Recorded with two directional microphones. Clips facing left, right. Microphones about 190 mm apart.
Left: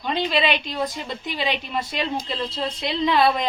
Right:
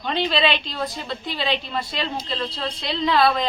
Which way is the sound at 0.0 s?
10° left (ahead or behind).